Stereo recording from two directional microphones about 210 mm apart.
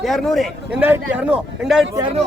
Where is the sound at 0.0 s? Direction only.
Centre (ahead or behind).